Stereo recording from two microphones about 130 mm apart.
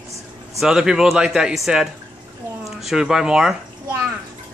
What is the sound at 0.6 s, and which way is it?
Speech, 5° right (ahead or behind).